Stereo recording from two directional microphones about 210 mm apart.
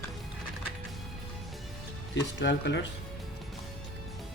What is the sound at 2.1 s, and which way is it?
Speech, 60° left (ahead or behind).